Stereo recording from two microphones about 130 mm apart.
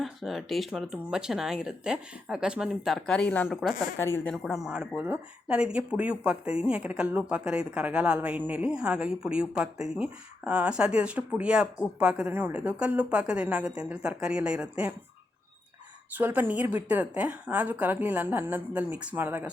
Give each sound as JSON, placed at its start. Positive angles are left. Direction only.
{"t": 0.0, "sound": "speech", "side_deg": 0}
{"t": 3.9, "sound": "a woman's voice", "side_deg": 20}
{"t": 4.3, "sound": "speech", "side_deg": 0}
{"t": 16.1, "sound": "speech", "side_deg": -15}